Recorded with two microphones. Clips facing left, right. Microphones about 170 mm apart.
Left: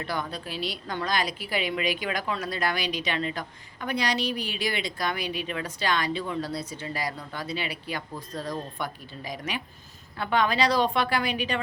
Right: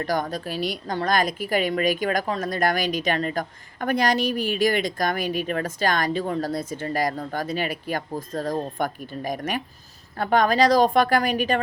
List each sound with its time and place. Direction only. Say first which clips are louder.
0.0 s a woman's voice: right 6 dB; 45° right (ahead or behind)